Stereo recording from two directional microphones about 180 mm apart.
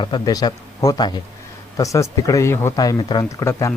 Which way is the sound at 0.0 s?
25° left (ahead or behind).